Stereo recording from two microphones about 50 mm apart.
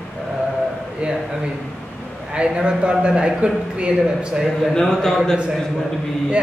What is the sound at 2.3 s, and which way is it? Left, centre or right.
A man's voice, centre.